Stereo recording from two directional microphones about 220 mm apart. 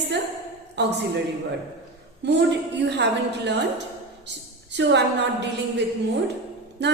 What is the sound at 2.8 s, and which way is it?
Speech, 50° right (ahead or behind).